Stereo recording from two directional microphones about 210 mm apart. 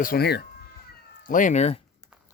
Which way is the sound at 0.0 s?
45° left (ahead or behind).